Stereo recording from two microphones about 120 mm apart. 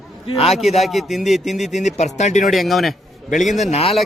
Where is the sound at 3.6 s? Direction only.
60° left (ahead or behind).